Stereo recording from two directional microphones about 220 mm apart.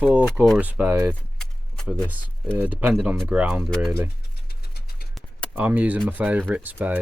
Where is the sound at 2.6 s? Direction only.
5° right (ahead or behind).